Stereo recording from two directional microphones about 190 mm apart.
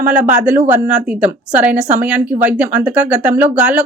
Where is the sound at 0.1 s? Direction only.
5° right (ahead or behind).